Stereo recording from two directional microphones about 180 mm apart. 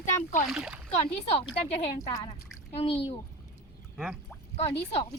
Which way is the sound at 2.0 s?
20° left (ahead or behind).